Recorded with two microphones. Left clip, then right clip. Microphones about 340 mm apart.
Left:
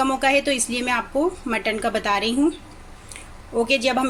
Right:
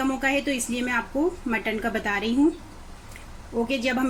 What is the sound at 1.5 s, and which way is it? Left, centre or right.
Speech, centre.